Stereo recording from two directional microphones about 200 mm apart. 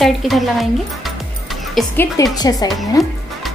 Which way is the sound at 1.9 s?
15° left (ahead or behind).